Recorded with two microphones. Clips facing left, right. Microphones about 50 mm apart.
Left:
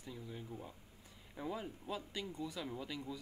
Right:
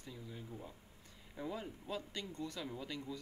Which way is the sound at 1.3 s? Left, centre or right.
Centre.